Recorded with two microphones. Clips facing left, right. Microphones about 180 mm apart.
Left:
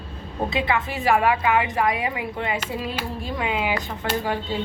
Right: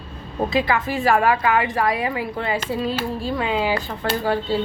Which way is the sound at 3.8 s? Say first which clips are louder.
Right 3 dB; 15° left (ahead or behind).